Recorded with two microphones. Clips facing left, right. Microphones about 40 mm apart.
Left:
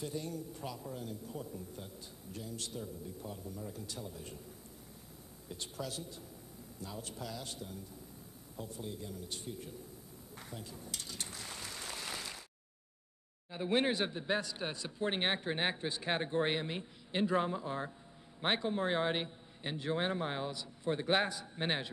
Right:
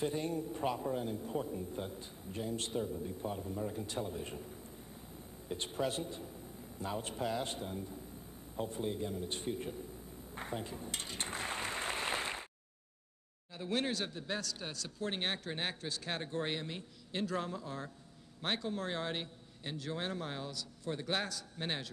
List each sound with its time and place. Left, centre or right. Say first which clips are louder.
0.0 s a man's voice: right 5 dB; right
5.5 s a man's voice: right 6 dB; right
10.3 s applause: right 7 dB; right
13.5 s a man's voice: left 4 dB; left